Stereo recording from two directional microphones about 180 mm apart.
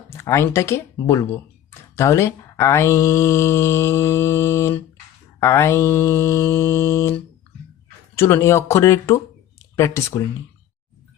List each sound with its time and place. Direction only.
0.1 s speech: 15° left (ahead or behind)